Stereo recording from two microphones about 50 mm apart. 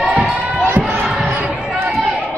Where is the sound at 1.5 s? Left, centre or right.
Centre.